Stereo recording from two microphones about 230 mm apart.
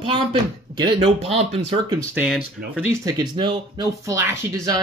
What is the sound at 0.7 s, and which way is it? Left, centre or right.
Speech, right.